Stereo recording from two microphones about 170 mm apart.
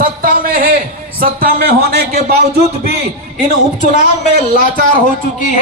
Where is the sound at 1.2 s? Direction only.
60° right (ahead or behind).